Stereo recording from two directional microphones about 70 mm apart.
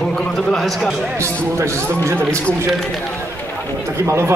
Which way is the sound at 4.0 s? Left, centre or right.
Right.